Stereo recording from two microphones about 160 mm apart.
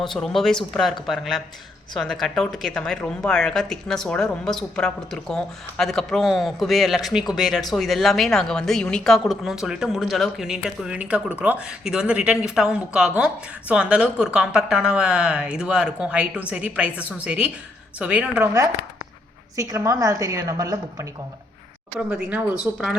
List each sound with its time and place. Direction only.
0.0 s a woman's voice: centre (ahead or behind)
19.5 s a woman's voice: 20° right (ahead or behind)
21.9 s a woman's voice: 10° right (ahead or behind)